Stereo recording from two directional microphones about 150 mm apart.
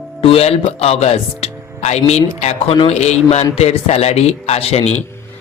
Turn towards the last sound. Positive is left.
turn(degrees=45)  # may be behind; listen again after turning